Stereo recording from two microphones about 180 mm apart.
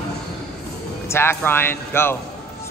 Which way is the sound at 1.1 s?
15° left (ahead or behind).